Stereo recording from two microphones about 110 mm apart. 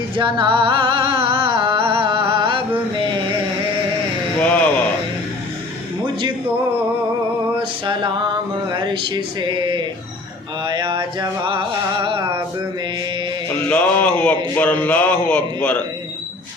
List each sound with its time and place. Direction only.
0.2 s music: 50° right (ahead or behind)
4.4 s a sound: 10° left (ahead or behind)
7.9 s music: 50° right (ahead or behind)
8.8 s speech: 45° right (ahead or behind)
10.7 s a sound: 45° right (ahead or behind)
13.7 s music: 10° left (ahead or behind)
14.5 s a man's voice: 15° left (ahead or behind)